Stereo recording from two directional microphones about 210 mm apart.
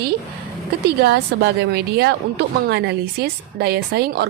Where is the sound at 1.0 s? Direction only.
50° right (ahead or behind).